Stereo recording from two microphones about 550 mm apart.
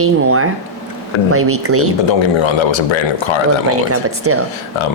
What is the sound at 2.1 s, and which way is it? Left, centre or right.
Speech, left.